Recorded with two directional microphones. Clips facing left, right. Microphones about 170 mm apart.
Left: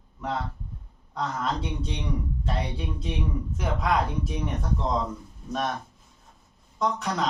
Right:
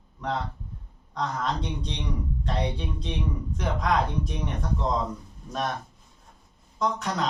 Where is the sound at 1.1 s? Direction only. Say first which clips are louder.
Even; 5° left (ahead or behind).